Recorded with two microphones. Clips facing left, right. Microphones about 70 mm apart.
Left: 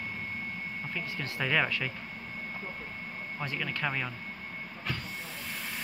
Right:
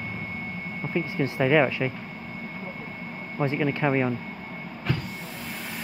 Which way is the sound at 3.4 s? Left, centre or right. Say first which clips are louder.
Right 10 dB; right.